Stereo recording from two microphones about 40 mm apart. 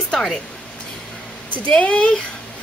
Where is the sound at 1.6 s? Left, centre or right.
Left.